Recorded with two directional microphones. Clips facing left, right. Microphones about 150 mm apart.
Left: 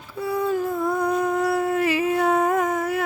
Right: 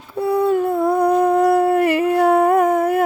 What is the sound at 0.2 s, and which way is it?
Humming, 60° right (ahead or behind).